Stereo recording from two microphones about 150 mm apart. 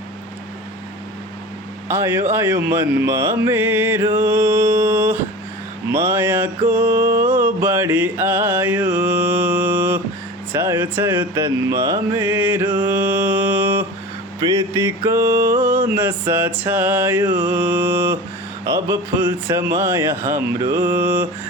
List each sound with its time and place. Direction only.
1.9 s mantra: 15° right (ahead or behind)